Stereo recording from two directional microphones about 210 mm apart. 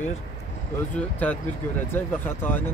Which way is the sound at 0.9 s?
5° left (ahead or behind).